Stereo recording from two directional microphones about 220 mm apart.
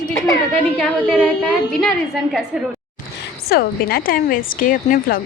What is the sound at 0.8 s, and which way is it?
Speech, 5° left (ahead or behind).